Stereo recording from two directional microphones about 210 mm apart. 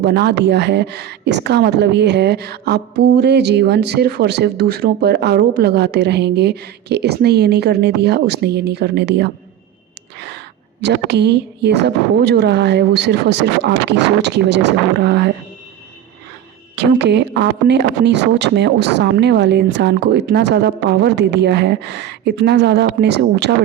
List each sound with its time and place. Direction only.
0.0 s a woman's voice: 55° right (ahead or behind)
16.7 s a woman's voice: 55° right (ahead or behind)